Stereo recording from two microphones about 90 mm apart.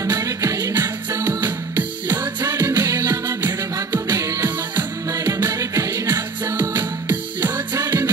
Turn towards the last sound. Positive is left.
turn(degrees=-25)  # may be behind; listen again after turning